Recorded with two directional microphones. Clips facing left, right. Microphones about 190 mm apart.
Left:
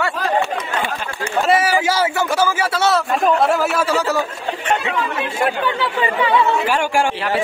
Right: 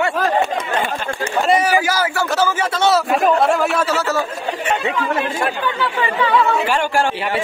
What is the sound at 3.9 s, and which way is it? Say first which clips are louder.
Speech: left 1 dB; 15° left (ahead or behind).